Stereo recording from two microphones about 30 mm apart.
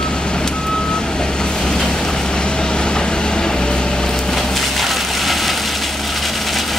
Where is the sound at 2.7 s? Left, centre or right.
Left.